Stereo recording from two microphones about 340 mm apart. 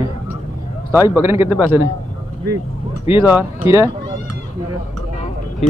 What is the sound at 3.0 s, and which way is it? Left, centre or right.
Speech, centre.